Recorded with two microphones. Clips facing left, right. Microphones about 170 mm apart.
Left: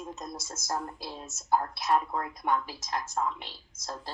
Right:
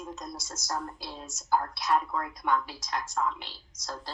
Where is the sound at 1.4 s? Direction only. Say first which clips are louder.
Left 1 dB; 25° left (ahead or behind).